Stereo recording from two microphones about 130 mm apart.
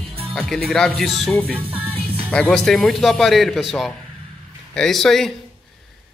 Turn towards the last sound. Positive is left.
turn(degrees=0)  # may be behind; listen again after turning